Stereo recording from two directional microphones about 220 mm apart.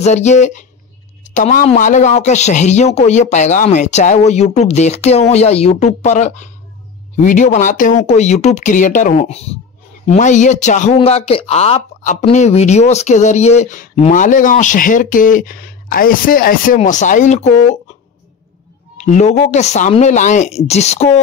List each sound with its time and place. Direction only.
0.0 s speech: 30° left (ahead or behind)
19.0 s speech: 30° left (ahead or behind)